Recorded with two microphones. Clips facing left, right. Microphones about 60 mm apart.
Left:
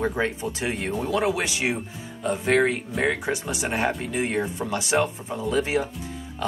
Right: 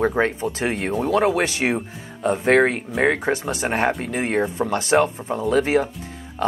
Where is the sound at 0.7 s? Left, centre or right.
Centre.